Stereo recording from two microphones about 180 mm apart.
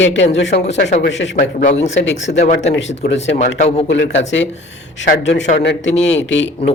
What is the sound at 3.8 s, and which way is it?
Speech, 75° left (ahead or behind).